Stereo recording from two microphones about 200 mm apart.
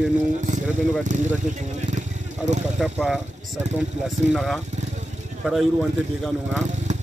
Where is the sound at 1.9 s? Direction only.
35° right (ahead or behind).